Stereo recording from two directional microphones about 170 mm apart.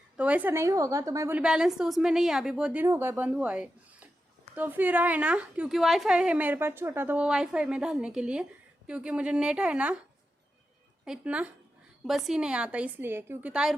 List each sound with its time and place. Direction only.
0.2 s a woman's voice: 10° right (ahead or behind)
1.4 s a woman's voice: 5° right (ahead or behind)
11.0 s a woman's voice: 5° right (ahead or behind)